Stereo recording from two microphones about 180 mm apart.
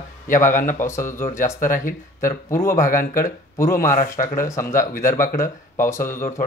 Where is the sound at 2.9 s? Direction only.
50° left (ahead or behind).